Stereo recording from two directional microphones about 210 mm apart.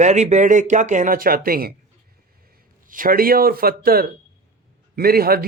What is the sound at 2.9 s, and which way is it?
Speech, 40° right (ahead or behind).